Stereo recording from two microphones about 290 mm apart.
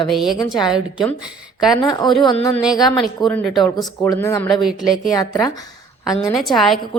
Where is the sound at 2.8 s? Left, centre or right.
Centre.